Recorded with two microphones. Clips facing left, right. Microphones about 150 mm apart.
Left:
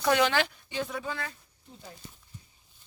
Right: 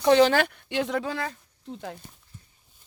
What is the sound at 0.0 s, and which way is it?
Speech, 30° right (ahead or behind).